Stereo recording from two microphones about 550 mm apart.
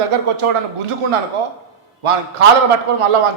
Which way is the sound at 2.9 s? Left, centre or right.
Right.